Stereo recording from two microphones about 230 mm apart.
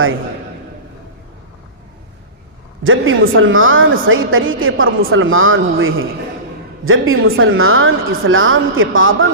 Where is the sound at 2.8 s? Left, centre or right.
Right.